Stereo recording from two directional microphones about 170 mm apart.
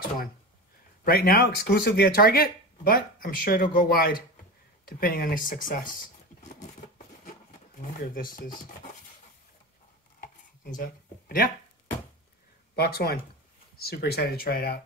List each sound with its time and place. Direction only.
1.0 s speech: 65° left (ahead or behind)
7.2 s a sound: 55° left (ahead or behind)
10.8 s speech: 55° left (ahead or behind)
12.7 s speech: 65° left (ahead or behind)